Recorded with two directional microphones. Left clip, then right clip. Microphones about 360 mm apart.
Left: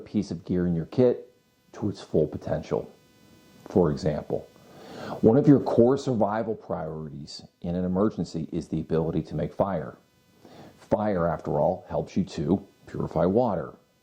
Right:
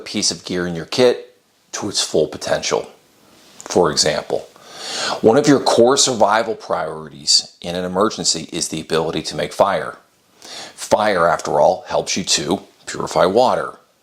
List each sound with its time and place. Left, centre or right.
0.0 s speech: centre
4.7 s a sound: centre
5.3 s speech: centre